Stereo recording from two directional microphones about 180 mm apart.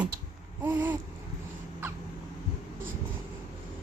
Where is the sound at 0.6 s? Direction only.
10° right (ahead or behind).